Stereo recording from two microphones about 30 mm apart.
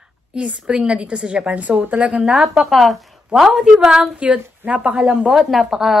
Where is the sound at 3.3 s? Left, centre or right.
Right.